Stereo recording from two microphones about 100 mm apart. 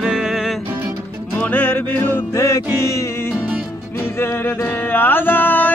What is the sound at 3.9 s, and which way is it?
Music, 25° left (ahead or behind).